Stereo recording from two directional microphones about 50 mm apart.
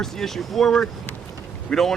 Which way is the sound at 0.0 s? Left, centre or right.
Centre.